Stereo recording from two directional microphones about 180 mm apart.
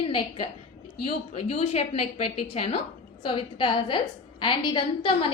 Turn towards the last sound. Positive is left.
turn(degrees=25)  # may be behind; listen again after turning